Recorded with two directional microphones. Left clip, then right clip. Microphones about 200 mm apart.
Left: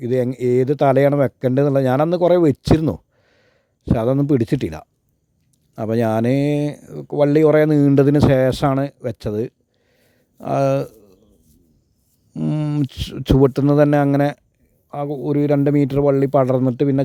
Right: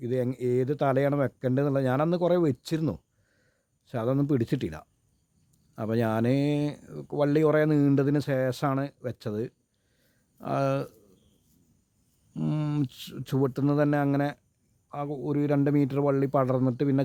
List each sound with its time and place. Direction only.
0.0 s speech: 35° left (ahead or behind)
10.0 s a sound: 35° left (ahead or behind)
12.3 s speech: 30° left (ahead or behind)